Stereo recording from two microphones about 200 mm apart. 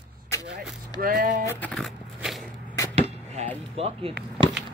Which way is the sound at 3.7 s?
30° right (ahead or behind).